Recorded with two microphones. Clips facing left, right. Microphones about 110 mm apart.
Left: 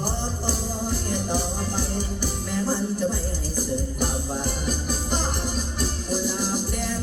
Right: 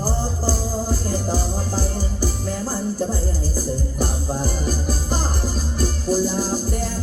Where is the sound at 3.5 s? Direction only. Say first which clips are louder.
Even; 35° right (ahead or behind).